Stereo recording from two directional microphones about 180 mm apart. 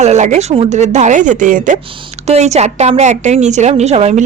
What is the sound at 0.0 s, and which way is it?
A woman's voice, 40° right (ahead or behind).